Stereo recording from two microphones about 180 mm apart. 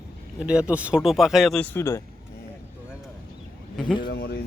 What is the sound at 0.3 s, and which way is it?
Speech, 5° right (ahead or behind).